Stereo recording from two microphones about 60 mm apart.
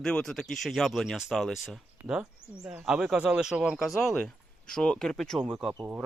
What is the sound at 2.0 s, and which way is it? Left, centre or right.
Speech, right.